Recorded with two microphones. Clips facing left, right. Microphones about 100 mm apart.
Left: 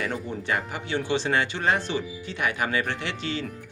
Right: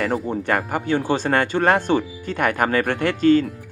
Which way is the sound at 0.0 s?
50° right (ahead or behind).